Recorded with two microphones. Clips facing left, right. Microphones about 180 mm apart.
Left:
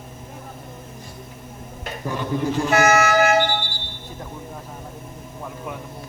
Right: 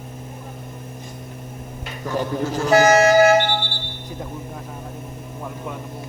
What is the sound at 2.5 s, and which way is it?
Speech, 35° right (ahead or behind).